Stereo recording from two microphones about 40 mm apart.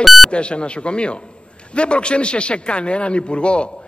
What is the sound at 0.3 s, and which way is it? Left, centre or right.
A man's voice, left.